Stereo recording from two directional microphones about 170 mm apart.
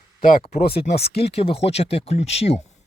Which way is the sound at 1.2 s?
35° left (ahead or behind).